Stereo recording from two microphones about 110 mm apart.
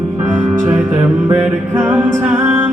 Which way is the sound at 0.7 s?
15° right (ahead or behind).